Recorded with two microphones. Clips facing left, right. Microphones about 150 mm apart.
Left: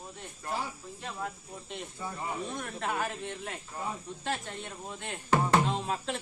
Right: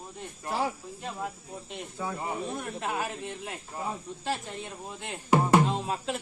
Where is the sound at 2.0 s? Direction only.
90° right.